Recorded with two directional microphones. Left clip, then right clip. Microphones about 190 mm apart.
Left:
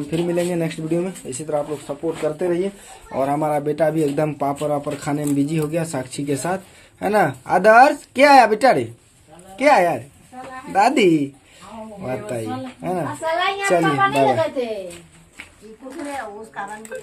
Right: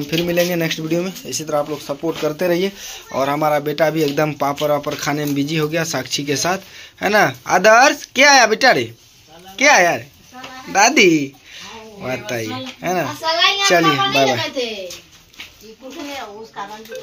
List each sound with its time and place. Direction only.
0.1 s speech: 5° right (ahead or behind)
2.2 s speech: 20° right (ahead or behind)
3.2 s speech: centre (ahead or behind)